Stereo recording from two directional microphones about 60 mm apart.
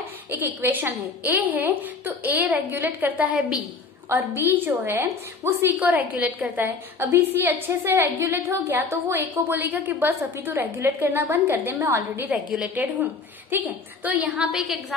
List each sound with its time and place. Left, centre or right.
0.3 s a woman's voice: right
5.9 s a woman's voice: right
7.0 s a woman's voice: right
12.3 s a woman's voice: right
14.0 s a woman's voice: right
14.5 s a woman's voice: centre